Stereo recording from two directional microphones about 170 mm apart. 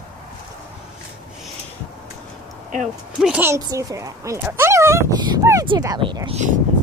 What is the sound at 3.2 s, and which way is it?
Speech, 10° right (ahead or behind).